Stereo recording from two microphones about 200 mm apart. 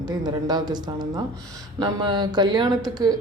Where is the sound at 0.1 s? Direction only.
20° right (ahead or behind).